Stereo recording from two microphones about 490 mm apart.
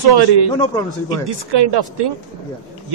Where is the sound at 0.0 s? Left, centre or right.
Right.